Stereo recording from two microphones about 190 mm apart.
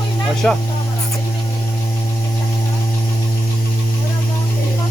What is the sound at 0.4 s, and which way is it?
Speech, 5° left (ahead or behind).